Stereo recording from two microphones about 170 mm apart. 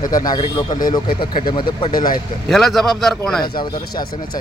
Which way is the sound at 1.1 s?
60° left (ahead or behind).